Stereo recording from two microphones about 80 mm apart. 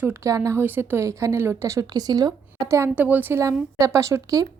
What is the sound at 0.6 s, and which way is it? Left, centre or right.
A woman's voice, right.